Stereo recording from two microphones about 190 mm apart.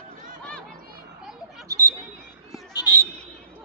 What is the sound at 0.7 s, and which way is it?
Children playing, 50° right (ahead or behind).